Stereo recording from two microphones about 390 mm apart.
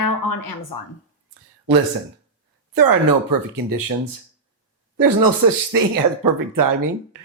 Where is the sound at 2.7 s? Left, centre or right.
Right.